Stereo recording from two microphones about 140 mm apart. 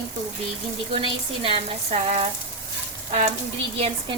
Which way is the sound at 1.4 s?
40° right (ahead or behind).